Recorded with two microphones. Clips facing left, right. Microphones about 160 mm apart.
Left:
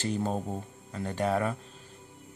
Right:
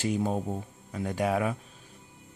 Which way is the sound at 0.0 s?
10° right (ahead or behind).